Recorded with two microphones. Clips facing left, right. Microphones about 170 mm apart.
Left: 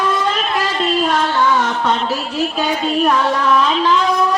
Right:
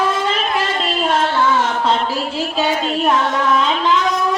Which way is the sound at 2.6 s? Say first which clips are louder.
Even; 25° right (ahead or behind).